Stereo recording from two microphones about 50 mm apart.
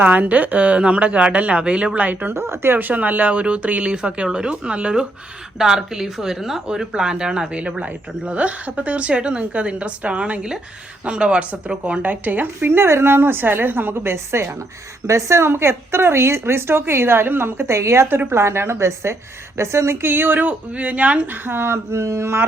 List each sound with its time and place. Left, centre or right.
0.0 s speech: right
2.3 s a woman's voice: right
2.7 s speech: right
5.5 s speech: centre; by 14.5 s right
15.0 s speech: right
15.4 s a woman's voice: right
21.4 s a woman's voice: right